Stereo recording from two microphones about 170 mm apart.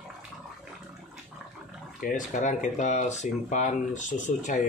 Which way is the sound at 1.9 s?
50° left (ahead or behind).